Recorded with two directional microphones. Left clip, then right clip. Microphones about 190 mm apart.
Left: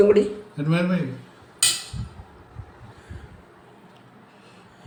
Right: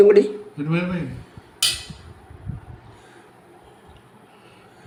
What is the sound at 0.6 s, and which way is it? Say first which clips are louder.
Speech: left 1 dB; 30° left (ahead or behind).